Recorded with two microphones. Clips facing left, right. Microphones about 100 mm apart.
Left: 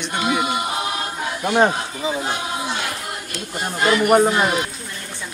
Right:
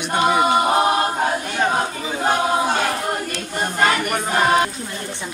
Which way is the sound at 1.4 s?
55° left (ahead or behind).